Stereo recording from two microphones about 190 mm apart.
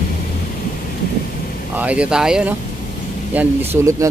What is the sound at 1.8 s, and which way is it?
Speech, 5° right (ahead or behind).